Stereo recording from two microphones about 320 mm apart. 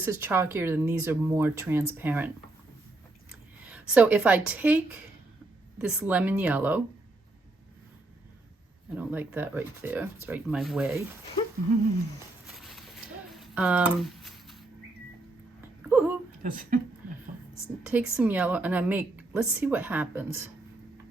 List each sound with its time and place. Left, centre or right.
0.0 s a woman's voice: centre
3.7 s a woman's voice: centre
5.8 s a woman's voice: centre
9.0 s a woman's voice: centre
13.3 s a sound: centre
15.9 s a sound: centre
16.4 s speech: right
17.8 s a woman's voice: centre